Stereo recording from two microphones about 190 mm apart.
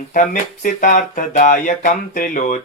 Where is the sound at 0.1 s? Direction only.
45° left (ahead or behind).